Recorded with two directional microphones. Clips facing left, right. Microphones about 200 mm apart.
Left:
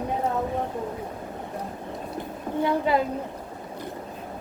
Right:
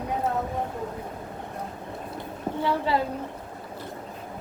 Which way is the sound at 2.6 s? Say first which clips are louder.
Left 2 dB; 20° left (ahead or behind).